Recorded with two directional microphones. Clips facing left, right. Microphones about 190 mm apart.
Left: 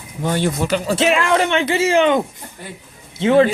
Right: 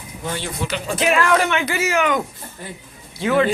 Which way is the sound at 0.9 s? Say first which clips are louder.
Even; 30° left (ahead or behind).